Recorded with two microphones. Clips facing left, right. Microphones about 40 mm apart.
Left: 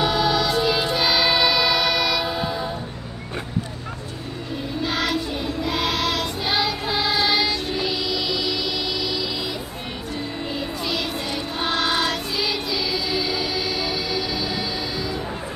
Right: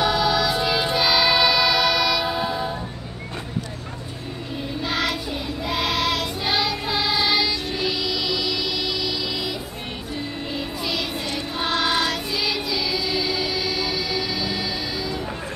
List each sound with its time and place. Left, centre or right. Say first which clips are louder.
0.0 s music: even; centre
0.9 s choir: right 3 dB; centre
4.8 s child singing: left 1 dB; centre
10.5 s music: even; centre